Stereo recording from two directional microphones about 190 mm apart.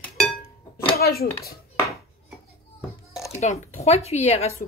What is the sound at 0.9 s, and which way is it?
Speech, 55° left (ahead or behind).